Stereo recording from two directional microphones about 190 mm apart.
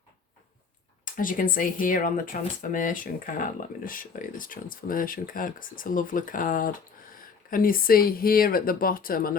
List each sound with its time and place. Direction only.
1.0 s speech: 45° left (ahead or behind)